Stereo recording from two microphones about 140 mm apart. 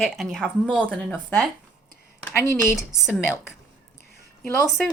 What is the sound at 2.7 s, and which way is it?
Speech, 5° right (ahead or behind).